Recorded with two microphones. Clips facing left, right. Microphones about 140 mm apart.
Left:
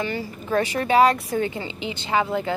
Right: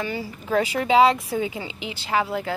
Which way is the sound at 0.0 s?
10° right (ahead or behind).